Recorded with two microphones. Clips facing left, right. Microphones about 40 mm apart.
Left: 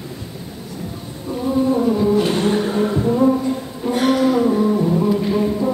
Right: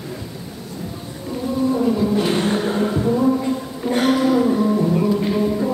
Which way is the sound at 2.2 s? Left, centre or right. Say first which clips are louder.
Left 1 dB; centre.